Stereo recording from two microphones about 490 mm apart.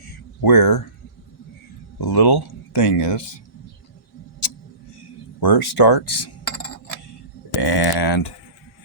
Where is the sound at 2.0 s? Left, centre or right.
Left.